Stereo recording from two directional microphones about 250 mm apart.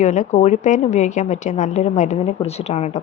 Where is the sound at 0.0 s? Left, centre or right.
Left.